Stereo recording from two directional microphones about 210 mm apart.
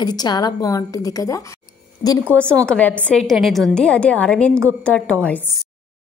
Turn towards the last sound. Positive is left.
turn(degrees=5)  # may be behind; listen again after turning